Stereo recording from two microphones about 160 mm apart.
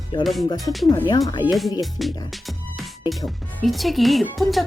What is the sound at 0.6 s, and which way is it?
Speech, centre (ahead or behind).